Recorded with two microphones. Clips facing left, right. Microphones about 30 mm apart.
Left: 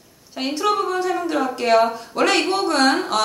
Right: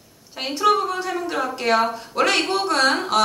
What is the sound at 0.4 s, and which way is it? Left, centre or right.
Speech, centre.